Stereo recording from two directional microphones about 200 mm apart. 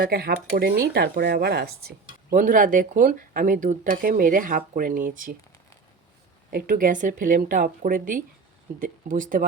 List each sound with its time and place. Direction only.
0.0 s speech: 50° right (ahead or behind)
6.5 s speech: 45° right (ahead or behind)